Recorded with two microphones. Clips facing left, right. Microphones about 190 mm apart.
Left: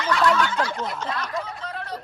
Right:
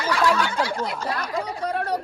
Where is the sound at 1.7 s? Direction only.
65° right (ahead or behind).